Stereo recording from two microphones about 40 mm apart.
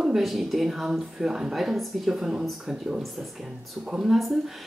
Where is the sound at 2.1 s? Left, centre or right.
Centre.